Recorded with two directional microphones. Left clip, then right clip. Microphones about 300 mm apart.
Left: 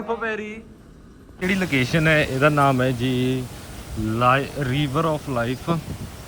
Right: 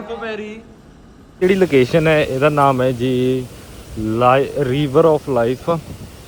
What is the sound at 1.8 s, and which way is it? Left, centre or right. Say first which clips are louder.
Speech: right 5 dB; centre.